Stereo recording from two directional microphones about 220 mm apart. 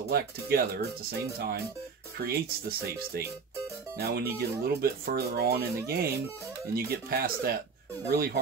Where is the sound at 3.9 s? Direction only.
45° right (ahead or behind).